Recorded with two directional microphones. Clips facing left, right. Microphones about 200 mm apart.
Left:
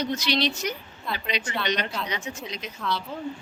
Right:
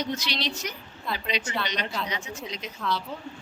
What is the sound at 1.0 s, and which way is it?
A woman's voice, centre (ahead or behind).